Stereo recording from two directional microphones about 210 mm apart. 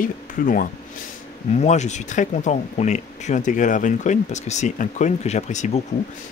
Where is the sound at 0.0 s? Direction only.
40° left (ahead or behind).